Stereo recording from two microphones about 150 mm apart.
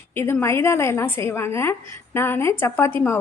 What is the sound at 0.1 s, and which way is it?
A woman's voice, 15° left (ahead or behind).